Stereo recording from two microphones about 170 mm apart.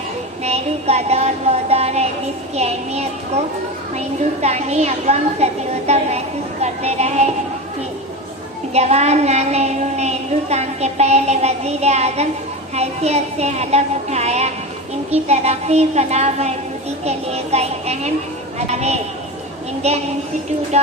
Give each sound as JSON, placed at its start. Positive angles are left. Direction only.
{"t": 0.4, "sound": "a woman's voice", "side_deg": -40}
{"t": 8.7, "sound": "a woman's voice", "side_deg": -40}